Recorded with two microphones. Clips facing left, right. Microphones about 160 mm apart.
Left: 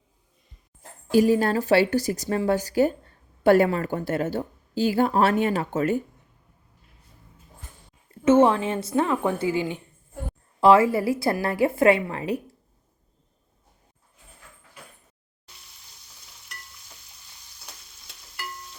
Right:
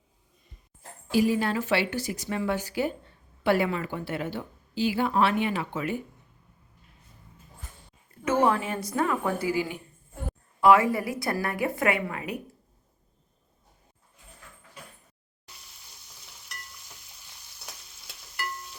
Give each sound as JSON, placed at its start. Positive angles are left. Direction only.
{"t": 0.8, "sound": "a woman's voice", "side_deg": 45}
{"t": 8.2, "sound": "a woman's voice", "side_deg": 25}